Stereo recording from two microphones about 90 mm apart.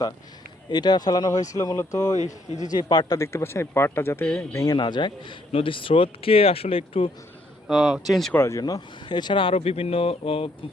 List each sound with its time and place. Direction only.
0.7 s speech: 50° left (ahead or behind); by 2.1 s 35° left (ahead or behind)
2.6 s speech: 50° left (ahead or behind)
3.2 s speech: 30° left (ahead or behind)
4.5 s a man's voice: 45° left (ahead or behind); by 7.1 s 90° left
7.7 s speech: centre (ahead or behind)
8.3 s speech: 30° left (ahead or behind)
8.6 s speech: 50° left (ahead or behind); by 10.5 s 90° left